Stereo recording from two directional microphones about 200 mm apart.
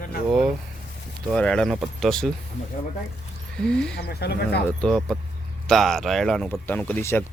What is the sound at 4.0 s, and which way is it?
Speech, 55° left (ahead or behind).